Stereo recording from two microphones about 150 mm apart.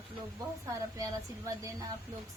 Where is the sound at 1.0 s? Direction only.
25° right (ahead or behind).